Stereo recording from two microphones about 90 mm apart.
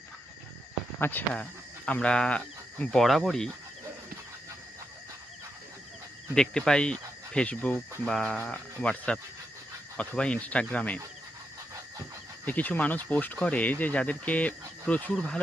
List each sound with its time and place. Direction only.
0.9 s speech: 25° left (ahead or behind)
1.3 s speech: 15° left (ahead or behind)
6.3 s speech: 10° left (ahead or behind)
12.5 s speech: 20° left (ahead or behind)